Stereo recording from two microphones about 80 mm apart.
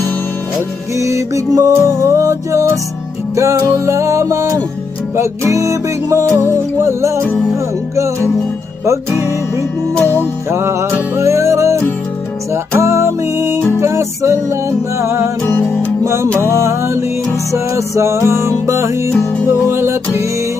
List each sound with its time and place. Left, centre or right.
0.9 s music: right
10.0 s music: left
10.5 s music: right
15.4 s music: left
16.0 s music: right